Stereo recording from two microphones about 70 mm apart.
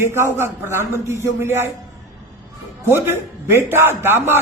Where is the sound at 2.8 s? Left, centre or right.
Right.